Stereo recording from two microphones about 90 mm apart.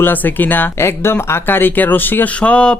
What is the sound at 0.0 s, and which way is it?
Speech, 20° left (ahead or behind).